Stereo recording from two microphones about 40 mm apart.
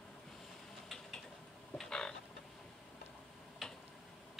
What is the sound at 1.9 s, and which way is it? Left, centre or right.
Chicken, centre.